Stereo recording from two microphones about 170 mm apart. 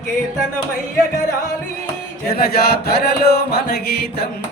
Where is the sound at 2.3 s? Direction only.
65° left (ahead or behind).